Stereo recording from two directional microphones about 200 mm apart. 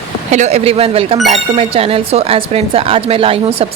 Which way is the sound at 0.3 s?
35° right (ahead or behind).